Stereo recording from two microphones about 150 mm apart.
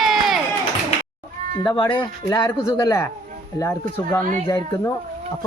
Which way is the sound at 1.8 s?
35° left (ahead or behind).